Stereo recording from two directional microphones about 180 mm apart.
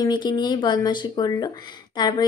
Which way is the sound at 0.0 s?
25° left (ahead or behind).